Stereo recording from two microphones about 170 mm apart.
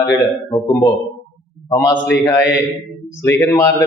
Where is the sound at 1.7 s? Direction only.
20° left (ahead or behind).